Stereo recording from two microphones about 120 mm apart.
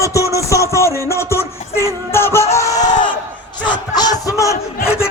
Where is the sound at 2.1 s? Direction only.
20° left (ahead or behind).